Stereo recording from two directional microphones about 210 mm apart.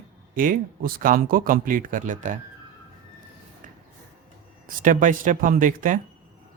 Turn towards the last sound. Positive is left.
turn(degrees=-40)  # may be behind; listen again after turning